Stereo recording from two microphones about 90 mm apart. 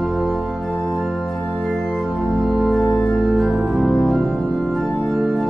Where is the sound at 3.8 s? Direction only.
15° left (ahead or behind).